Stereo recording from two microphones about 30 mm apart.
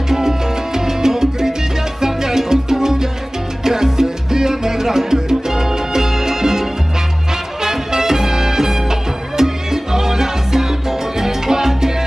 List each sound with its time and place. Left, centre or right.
0.1 s salsa music: centre
7.6 s music: centre
9.4 s salsa music: centre